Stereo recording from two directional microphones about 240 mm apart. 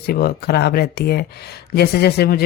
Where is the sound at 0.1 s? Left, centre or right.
Left.